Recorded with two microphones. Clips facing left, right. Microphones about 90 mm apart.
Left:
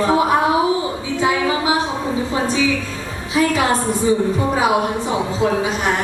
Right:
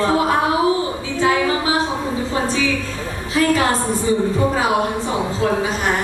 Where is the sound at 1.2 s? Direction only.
20° left (ahead or behind).